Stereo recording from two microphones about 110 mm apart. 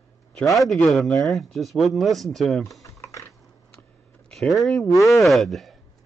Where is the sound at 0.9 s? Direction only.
Centre (ahead or behind).